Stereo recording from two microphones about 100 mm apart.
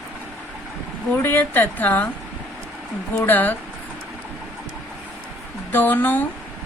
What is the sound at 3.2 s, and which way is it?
Speech, 20° left (ahead or behind).